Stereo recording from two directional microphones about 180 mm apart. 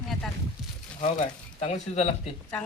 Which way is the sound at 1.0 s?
40° left (ahead or behind).